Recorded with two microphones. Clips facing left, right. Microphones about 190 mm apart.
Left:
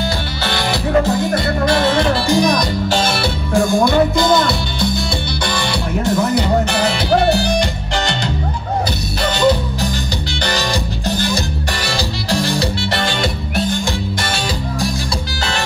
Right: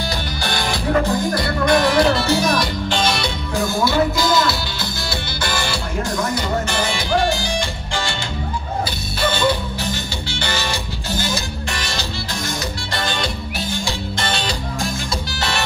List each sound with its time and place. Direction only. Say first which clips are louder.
1.3 s music: left 1 dB; 25° left (ahead or behind)
2.2 s music: left 3 dB; 15° left (ahead or behind)
3.2 s music: left 6 dB; centre (ahead or behind)
6.3 s music: left 6 dB; 65° left (ahead or behind)
10.4 s music: left 5 dB; 40° left (ahead or behind)